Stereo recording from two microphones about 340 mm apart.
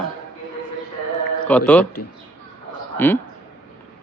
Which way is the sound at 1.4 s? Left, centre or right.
Centre.